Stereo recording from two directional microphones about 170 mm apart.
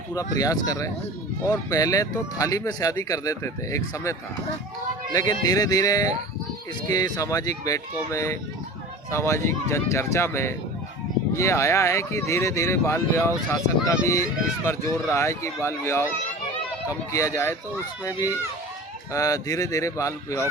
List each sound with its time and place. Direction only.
0.1 s speech: 20° left (ahead or behind)
5.1 s speech: 20° left (ahead or behind)
19.1 s speech: 20° left (ahead or behind)